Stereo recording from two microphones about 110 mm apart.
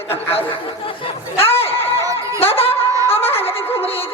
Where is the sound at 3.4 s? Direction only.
60° left (ahead or behind).